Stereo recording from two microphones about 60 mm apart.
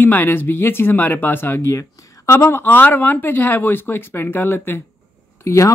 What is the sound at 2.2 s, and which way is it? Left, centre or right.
Speech, left.